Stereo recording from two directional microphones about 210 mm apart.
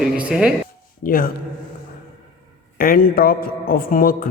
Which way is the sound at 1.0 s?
45° left (ahead or behind).